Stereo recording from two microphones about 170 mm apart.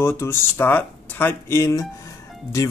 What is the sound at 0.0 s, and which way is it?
Speech, 15° left (ahead or behind).